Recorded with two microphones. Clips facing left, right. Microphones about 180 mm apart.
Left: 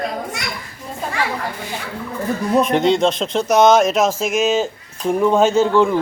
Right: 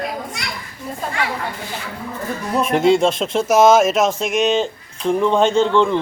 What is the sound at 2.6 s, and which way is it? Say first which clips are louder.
Speech: right 1 dB; 5° right (ahead or behind).